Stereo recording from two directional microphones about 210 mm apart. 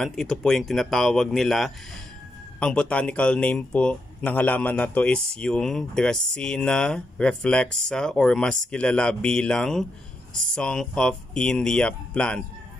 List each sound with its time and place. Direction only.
0.0 s speech: centre (ahead or behind)